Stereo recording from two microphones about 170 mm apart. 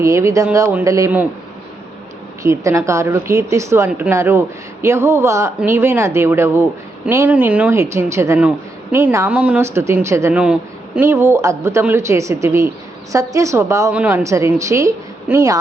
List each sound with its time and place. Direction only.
0.0 s speech: 20° right (ahead or behind)
2.4 s speech: 20° right (ahead or behind)